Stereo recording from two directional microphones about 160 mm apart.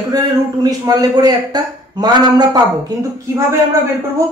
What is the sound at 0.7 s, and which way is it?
A man's voice, 25° right (ahead or behind).